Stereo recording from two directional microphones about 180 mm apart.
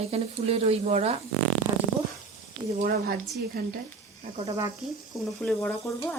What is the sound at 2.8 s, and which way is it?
Speech, 55° right (ahead or behind).